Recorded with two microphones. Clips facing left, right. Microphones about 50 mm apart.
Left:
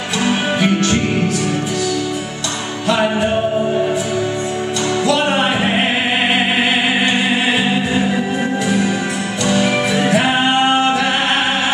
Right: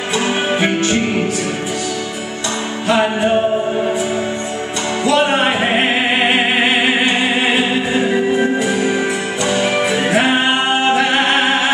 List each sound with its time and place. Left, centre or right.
0.2 s music: centre
2.9 s music: centre
5.0 s music: centre